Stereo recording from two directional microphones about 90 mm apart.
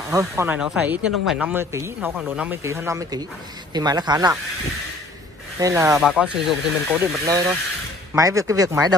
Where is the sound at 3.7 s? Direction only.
50° right (ahead or behind).